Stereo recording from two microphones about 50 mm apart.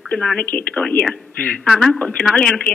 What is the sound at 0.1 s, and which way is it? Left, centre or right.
Speech, left.